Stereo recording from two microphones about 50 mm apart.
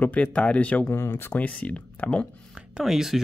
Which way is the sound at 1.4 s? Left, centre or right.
Left.